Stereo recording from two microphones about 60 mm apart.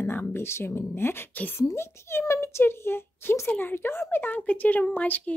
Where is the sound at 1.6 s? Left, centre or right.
Left.